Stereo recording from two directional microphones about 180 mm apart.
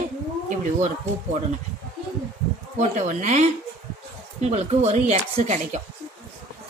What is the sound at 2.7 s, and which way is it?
A woman's voice, 40° right (ahead or behind).